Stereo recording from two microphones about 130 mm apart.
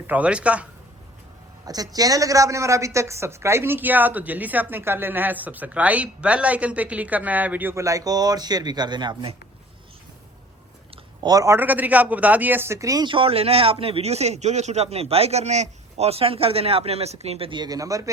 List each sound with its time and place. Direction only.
0.1 s speech: 10° right (ahead or behind)
1.6 s speech: 30° right (ahead or behind)
10.9 s speech: 30° right (ahead or behind)
13.1 s a man's voice: 45° right (ahead or behind); by 18.1 s 25° right (ahead or behind)